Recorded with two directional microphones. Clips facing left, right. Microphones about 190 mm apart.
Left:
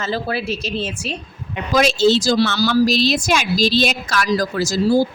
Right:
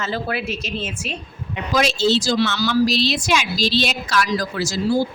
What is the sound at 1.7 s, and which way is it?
A woman's voice, 50° left (ahead or behind).